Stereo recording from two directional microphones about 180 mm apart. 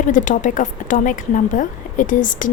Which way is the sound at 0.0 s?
45° left (ahead or behind).